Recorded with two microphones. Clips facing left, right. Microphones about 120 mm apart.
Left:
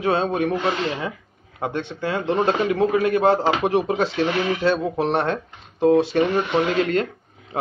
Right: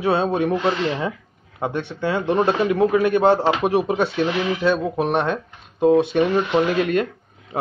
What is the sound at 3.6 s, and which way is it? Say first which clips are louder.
Speech: right 1 dB; 15° right (ahead or behind).